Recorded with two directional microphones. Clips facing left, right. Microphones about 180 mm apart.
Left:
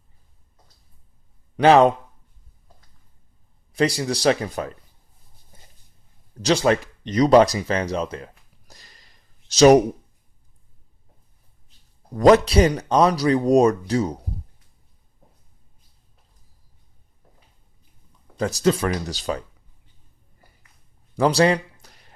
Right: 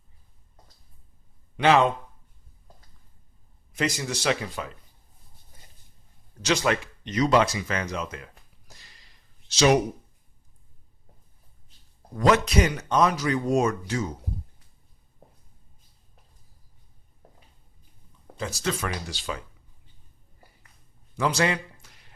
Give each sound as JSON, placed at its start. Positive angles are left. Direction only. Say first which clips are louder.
{"t": 1.5, "sound": "speech", "louder": "left 6 dB", "side_deg": 40}
{"t": 3.7, "sound": "speech", "louder": "left 7 dB", "side_deg": 35}
{"t": 6.4, "sound": "speech", "louder": "left 6 dB", "side_deg": 30}
{"t": 12.1, "sound": "speech", "louder": "left 7 dB", "side_deg": 35}
{"t": 18.6, "sound": "speech", "louder": "left 9 dB", "side_deg": 35}
{"t": 21.2, "sound": "a sound", "louder": "left 7 dB", "side_deg": 35}